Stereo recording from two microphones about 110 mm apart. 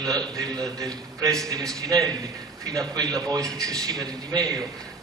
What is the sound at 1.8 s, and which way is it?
A man's voice, 35° right (ahead or behind).